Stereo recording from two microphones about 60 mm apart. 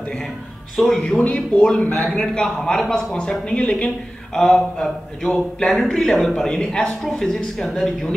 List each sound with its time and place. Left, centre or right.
0.7 s speech: centre
1.0 s speech: left; by 7.7 s centre